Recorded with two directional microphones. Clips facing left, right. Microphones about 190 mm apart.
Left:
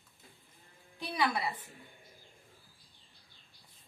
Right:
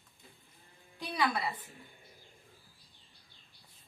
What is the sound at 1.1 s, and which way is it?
Speech, 10° left (ahead or behind).